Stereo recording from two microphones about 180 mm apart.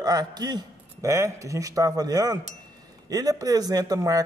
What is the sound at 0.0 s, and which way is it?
A man's voice, 20° right (ahead or behind).